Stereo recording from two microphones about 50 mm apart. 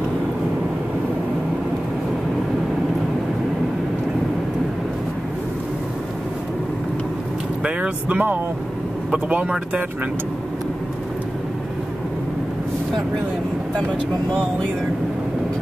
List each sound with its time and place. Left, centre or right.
7.6 s speech: right
14.3 s speech: left